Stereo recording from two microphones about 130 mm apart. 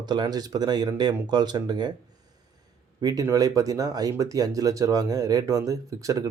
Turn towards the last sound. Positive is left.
turn(degrees=-25)  # may be behind; listen again after turning